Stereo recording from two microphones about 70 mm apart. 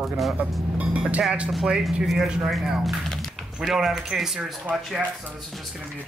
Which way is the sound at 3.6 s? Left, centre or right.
Centre.